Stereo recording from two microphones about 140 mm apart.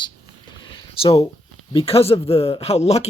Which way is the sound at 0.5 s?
35° left (ahead or behind).